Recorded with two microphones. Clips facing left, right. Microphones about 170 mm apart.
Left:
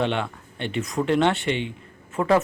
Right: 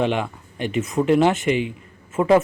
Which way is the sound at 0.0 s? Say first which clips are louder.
Right 3 dB; 10° right (ahead or behind).